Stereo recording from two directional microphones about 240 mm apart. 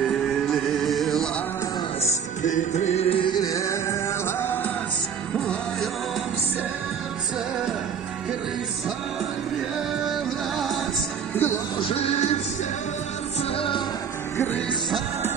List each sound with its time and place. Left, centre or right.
0.0 s music: centre
2.0 s music: left; by 5.9 s centre
11.3 s music: centre
11.8 s music: left
13.4 s music: left
14.3 s music: centre